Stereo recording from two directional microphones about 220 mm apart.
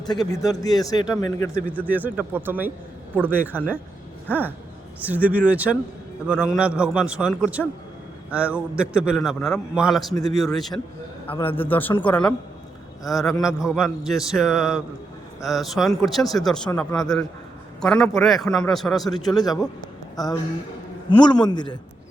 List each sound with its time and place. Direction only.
0.3 s speech: 15° left (ahead or behind)
1.9 s speech: 10° right (ahead or behind)
4.9 s a man's voice: 5° right (ahead or behind)
11.3 s a man's voice: 25° left (ahead or behind)
11.5 s a man's voice: 10° left (ahead or behind)
19.2 s a man's voice: 15° left (ahead or behind)